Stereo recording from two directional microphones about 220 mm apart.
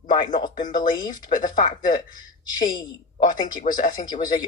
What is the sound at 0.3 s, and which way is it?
Speech, 20° left (ahead or behind).